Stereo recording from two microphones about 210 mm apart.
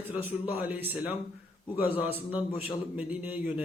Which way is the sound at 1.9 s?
25° left (ahead or behind).